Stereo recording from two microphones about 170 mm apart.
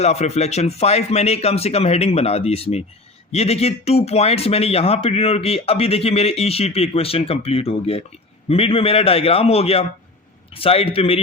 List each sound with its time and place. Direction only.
0.0 s speech: 40° left (ahead or behind)